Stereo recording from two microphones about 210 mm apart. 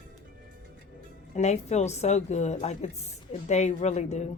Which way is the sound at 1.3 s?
30° left (ahead or behind).